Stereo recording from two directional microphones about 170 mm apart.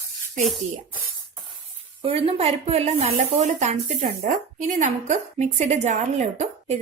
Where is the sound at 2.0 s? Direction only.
35° right (ahead or behind).